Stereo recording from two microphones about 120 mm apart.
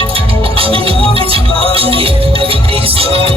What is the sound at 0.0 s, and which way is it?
Music, 50° right (ahead or behind).